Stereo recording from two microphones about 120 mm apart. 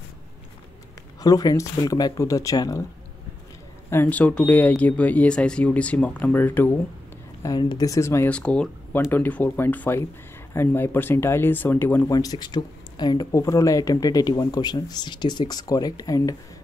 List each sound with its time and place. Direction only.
1.2 s speech: 30° left (ahead or behind)
3.9 s speech: 15° left (ahead or behind)
7.4 s speech: 35° left (ahead or behind)
8.3 s speech: 10° left (ahead or behind)
12.1 s speech: 30° left (ahead or behind)